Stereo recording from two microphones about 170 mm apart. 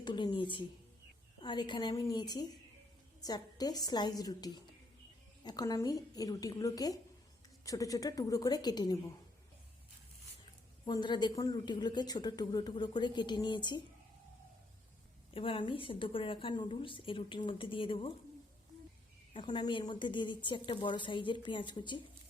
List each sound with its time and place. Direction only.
0.0 s a woman's voice: 25° left (ahead or behind)
10.8 s a woman's voice: 25° left (ahead or behind)
15.3 s a woman's voice: 30° left (ahead or behind)
19.3 s a woman's voice: 30° left (ahead or behind)